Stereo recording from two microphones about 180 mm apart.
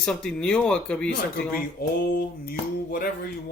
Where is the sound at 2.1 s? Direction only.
55° left (ahead or behind).